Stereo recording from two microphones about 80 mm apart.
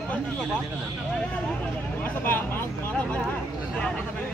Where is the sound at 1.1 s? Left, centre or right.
Centre.